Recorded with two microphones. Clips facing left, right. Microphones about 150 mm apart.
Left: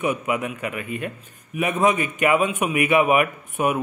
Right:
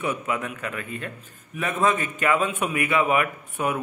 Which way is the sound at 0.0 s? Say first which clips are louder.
Left 4 dB; 15° left (ahead or behind).